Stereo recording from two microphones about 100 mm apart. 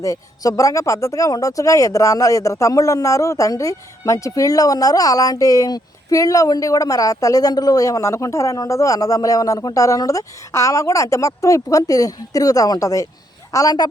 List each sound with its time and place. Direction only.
0.0 s speech: 30° left (ahead or behind)